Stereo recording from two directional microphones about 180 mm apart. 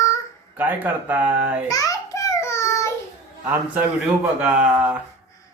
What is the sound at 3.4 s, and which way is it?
A man's voice, 10° right (ahead or behind).